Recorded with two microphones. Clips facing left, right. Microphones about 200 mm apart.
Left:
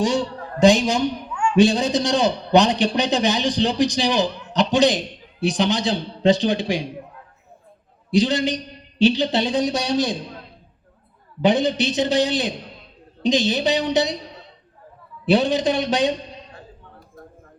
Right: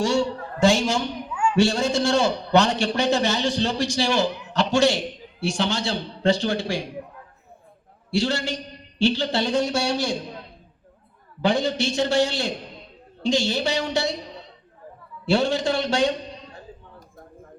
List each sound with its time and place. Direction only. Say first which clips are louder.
0.0 s a man's voice: left 1 dB; 20° left (ahead or behind)
1.3 s a sound: left 1 dB; 5° right (ahead or behind)
1.5 s a man's voice: left 4 dB; 20° left (ahead or behind)
8.1 s a man's voice: left 5 dB; 20° left (ahead or behind)
11.4 s a man's voice: left 4 dB; 20° left (ahead or behind)
15.3 s a man's voice: left 3 dB; 20° left (ahead or behind)